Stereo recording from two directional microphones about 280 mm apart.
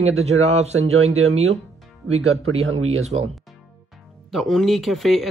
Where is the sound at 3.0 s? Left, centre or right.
Right.